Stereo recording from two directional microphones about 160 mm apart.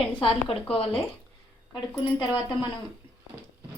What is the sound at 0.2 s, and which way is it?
Speech, 30° left (ahead or behind).